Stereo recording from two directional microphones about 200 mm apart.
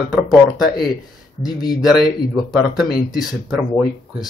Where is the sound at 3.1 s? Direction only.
Centre (ahead or behind).